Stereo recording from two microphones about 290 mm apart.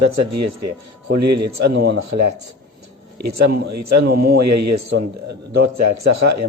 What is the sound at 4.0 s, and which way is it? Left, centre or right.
Speech, right.